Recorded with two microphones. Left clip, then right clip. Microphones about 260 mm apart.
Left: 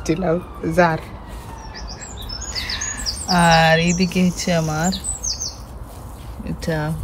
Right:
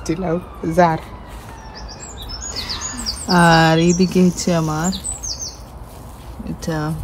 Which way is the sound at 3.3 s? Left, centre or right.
Centre.